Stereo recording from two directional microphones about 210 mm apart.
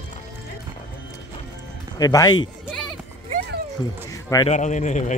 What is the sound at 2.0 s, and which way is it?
Speech, 20° left (ahead or behind).